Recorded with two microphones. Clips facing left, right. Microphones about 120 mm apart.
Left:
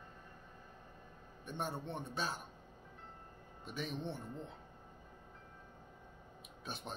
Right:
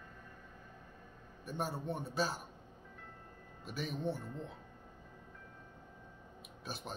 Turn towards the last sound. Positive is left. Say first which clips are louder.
# right 1 dB
turn(degrees=0)  # may be behind; listen again after turning